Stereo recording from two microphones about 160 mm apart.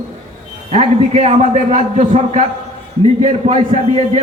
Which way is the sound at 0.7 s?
45° right (ahead or behind).